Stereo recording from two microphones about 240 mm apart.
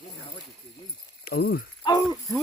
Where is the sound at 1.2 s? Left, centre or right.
Left.